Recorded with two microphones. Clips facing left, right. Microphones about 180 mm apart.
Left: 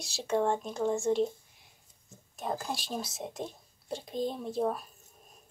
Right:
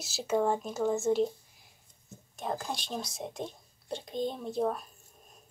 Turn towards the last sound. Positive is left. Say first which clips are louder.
# even
turn(degrees=0)  # may be behind; listen again after turning